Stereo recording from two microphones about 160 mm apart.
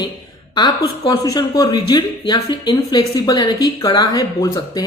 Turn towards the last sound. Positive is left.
turn(degrees=25)  # may be behind; listen again after turning